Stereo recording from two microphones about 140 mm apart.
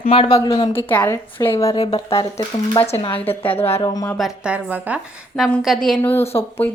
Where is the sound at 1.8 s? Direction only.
45° left (ahead or behind).